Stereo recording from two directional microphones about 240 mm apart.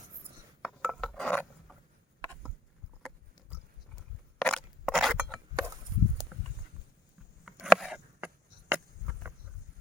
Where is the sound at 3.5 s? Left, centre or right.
Centre.